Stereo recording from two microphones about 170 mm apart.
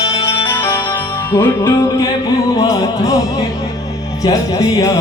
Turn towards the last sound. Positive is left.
turn(degrees=20)  # may be behind; listen again after turning